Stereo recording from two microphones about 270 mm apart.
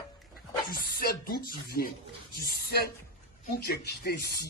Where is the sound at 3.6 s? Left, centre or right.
Left.